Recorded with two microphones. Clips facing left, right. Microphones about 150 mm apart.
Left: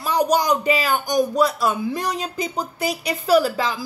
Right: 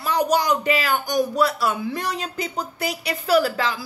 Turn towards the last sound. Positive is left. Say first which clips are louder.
# left 1 dB
turn(degrees=15)  # may be behind; listen again after turning